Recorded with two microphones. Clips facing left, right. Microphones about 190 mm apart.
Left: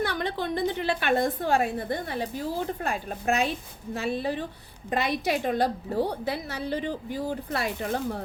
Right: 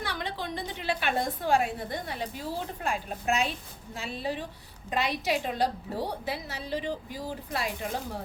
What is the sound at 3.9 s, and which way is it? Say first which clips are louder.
A woman's voice: left 5 dB; 55° left (ahead or behind).